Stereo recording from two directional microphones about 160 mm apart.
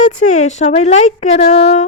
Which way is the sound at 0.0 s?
50° left (ahead or behind).